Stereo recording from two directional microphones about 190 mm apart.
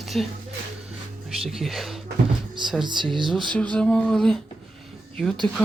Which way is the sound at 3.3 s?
5° left (ahead or behind).